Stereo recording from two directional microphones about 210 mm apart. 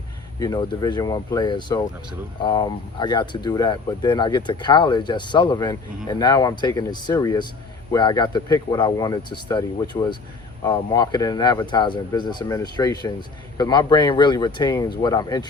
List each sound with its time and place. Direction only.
0.3 s speech: 20° left (ahead or behind)